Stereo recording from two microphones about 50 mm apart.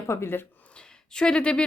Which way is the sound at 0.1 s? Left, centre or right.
Left.